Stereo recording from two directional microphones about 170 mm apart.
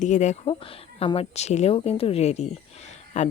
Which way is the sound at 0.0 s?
45° left (ahead or behind).